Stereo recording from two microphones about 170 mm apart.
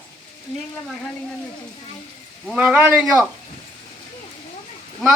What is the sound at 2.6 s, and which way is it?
Speech, 10° right (ahead or behind).